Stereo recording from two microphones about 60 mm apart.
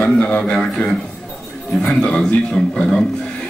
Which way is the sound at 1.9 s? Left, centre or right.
Centre.